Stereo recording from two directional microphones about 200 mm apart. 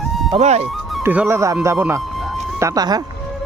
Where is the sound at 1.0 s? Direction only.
10° right (ahead or behind).